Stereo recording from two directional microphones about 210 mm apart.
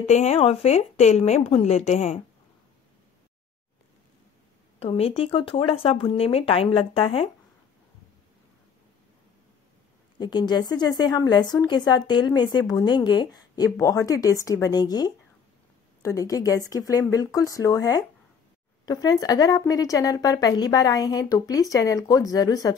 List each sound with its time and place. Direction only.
0.0 s a woman's voice: 30° left (ahead or behind)
4.7 s a woman's voice: 30° left (ahead or behind)
10.1 s a woman's voice: 20° left (ahead or behind)